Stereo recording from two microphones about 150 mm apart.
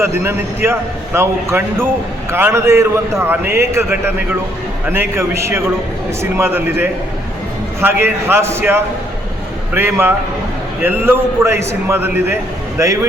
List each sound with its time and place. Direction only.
0.0 s a man's voice: 15° right (ahead or behind)